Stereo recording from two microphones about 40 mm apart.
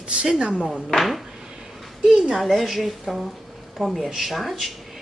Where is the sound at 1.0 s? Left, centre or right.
Centre.